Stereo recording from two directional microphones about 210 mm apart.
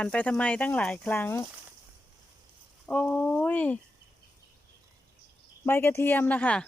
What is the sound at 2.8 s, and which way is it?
Speech, 5° left (ahead or behind).